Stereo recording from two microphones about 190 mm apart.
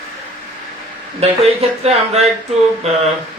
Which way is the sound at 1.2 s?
35° right (ahead or behind).